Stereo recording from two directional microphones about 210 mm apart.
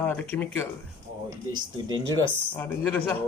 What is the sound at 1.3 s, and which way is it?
Speech, 20° right (ahead or behind).